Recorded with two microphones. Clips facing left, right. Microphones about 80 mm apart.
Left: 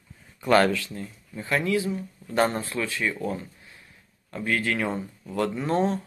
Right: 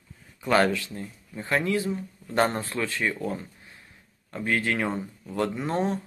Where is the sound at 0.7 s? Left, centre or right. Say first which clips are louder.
Left 1 dB; right.